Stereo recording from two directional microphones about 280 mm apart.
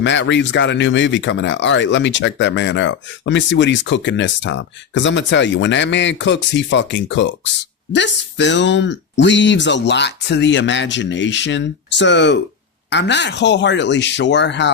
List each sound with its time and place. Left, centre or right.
0.0 s speech: left